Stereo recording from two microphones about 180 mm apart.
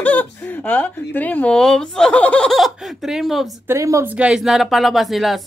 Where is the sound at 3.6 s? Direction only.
15° right (ahead or behind).